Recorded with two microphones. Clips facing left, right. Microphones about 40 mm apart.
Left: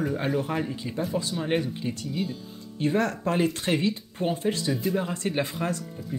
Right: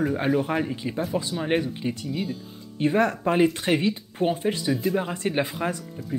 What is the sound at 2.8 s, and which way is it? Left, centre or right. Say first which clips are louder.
Speech: right 3 dB; centre.